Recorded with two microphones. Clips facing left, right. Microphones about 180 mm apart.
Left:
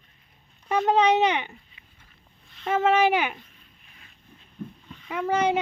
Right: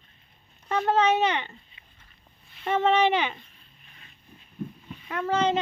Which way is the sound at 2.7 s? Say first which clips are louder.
Left 1 dB; 5° left (ahead or behind).